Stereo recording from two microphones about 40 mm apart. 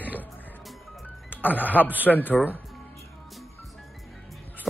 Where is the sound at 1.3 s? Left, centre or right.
Left.